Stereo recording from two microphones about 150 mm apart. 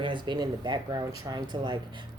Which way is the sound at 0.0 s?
30° right (ahead or behind).